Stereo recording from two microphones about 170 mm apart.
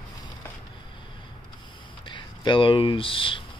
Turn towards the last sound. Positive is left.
turn(degrees=30)  # may be behind; listen again after turning